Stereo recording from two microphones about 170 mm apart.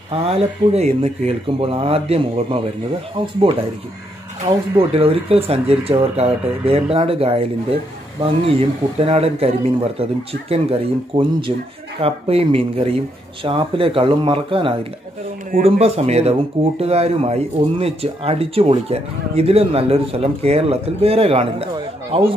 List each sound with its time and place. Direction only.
0.1 s speech: 35° right (ahead or behind)
4.7 s speech: 35° right (ahead or behind)
8.5 s speech: 35° right (ahead or behind)